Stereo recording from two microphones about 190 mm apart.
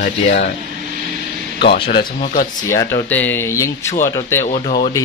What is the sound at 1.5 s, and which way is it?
Speech, 60° left (ahead or behind).